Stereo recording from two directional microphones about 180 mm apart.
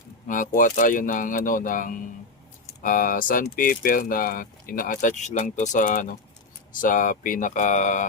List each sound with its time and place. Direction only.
0.3 s speech: 45° left (ahead or behind)